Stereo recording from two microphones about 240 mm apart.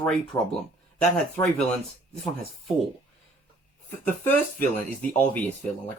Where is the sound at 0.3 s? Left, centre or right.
Centre.